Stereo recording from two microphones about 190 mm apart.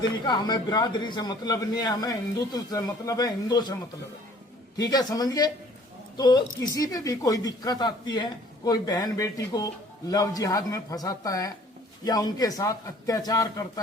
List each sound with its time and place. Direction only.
0.3 s a man's voice: 20° left (ahead or behind)
4.8 s a man's voice: 20° left (ahead or behind)